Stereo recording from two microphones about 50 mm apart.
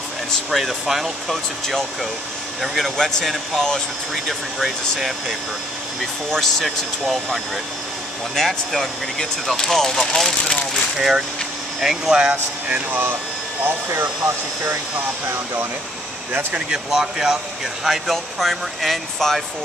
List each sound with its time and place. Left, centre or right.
0.5 s speech: centre
3.0 s speech: centre
6.3 s speech: centre
8.4 s speech: centre
11.0 s speech: centre
12.2 s speech: right
13.7 s speech: right
16.5 s speech: centre